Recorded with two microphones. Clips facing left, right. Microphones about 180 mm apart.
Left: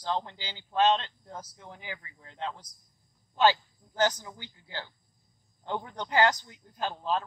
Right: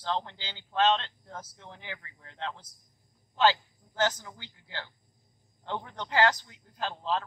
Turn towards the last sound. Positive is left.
turn(degrees=15)  # may be behind; listen again after turning